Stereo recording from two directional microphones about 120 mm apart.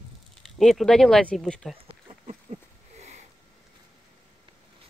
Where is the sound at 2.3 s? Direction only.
65° right (ahead or behind).